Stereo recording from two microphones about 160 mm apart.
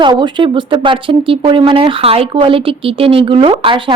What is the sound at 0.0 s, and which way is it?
A woman's voice, 30° right (ahead or behind).